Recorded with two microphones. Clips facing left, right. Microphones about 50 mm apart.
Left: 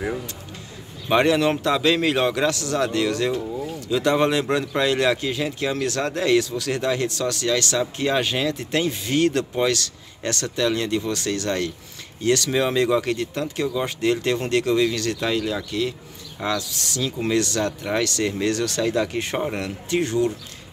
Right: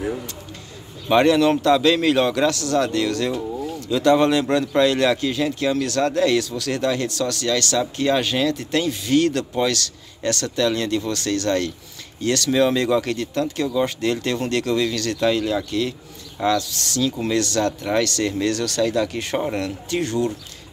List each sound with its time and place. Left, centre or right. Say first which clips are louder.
1.1 s speech: right 3 dB; centre